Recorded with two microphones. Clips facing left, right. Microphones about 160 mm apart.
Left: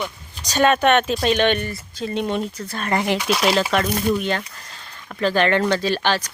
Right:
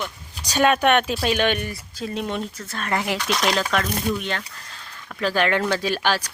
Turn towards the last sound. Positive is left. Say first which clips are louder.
# left 2 dB
turn(degrees=-10)  # may be behind; listen again after turning